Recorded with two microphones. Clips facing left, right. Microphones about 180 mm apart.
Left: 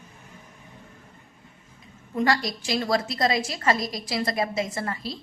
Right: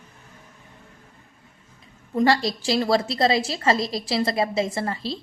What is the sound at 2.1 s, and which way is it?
A woman's voice, 30° right (ahead or behind).